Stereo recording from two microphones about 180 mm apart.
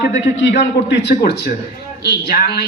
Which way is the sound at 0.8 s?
70° left (ahead or behind).